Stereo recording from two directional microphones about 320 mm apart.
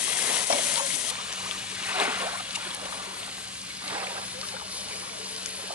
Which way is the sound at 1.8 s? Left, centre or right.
Centre.